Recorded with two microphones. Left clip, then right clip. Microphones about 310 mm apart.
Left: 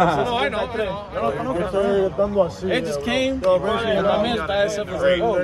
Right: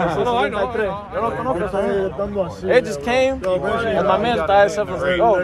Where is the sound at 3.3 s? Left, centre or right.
Centre.